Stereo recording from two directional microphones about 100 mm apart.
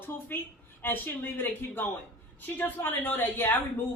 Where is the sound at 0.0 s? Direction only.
20° left (ahead or behind).